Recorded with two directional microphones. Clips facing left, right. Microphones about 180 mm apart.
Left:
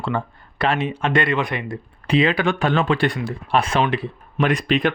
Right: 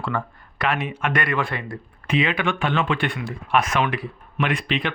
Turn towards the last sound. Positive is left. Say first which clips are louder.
# left 5 dB
turn(degrees=45)  # may be behind; listen again after turning